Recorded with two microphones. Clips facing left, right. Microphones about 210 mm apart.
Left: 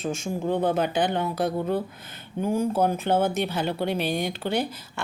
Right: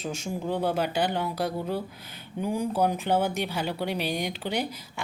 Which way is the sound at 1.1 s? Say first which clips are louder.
Left 3 dB; 50° left (ahead or behind).